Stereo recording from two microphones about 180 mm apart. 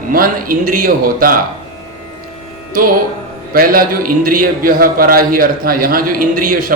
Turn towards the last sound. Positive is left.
turn(degrees=-50)  # may be behind; listen again after turning